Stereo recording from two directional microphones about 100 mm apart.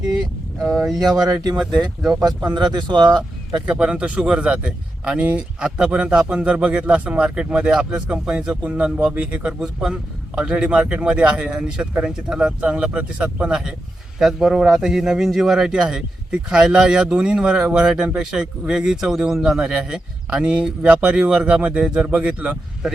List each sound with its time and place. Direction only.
0.9 s speech: 40° right (ahead or behind)
1.5 s speech: 10° right (ahead or behind)
2.0 s speech: 45° right (ahead or behind)
3.7 s speech: 10° right (ahead or behind)